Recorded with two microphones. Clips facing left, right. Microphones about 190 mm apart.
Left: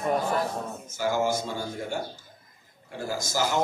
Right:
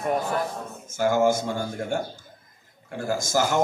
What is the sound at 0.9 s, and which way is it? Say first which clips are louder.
A man's voice: right 6 dB; 50° right (ahead or behind).